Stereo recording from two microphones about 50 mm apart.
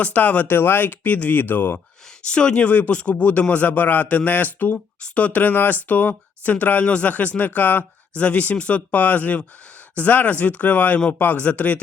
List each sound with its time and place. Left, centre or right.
0.0 s speech: left
0.4 s speech: left
2.2 s speech: centre